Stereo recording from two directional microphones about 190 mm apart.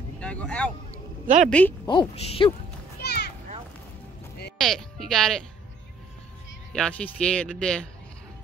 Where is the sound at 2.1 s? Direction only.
30° left (ahead or behind).